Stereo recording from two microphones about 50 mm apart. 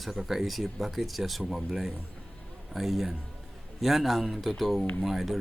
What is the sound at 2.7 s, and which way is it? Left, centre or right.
Speech, centre.